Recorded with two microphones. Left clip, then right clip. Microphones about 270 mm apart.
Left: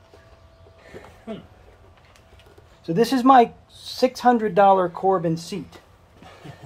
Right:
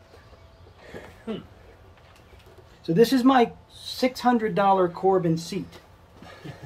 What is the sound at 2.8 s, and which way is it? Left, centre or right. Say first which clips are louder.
Speech: right 1 dB; centre.